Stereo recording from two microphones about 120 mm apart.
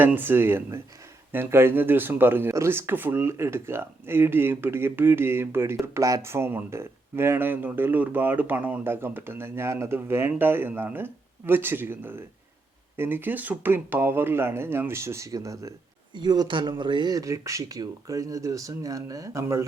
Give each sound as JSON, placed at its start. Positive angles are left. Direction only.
{"t": 0.0, "sound": "speech", "side_deg": -15}